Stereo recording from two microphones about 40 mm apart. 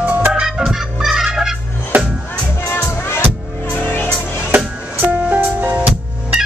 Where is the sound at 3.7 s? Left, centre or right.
Left.